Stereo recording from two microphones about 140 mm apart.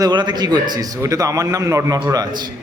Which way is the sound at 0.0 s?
30° right (ahead or behind).